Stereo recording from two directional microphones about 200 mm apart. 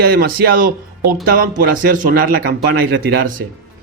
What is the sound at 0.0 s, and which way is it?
Speech, 50° right (ahead or behind).